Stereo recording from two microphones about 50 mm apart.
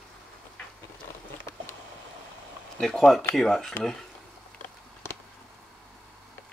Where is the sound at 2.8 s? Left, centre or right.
Centre.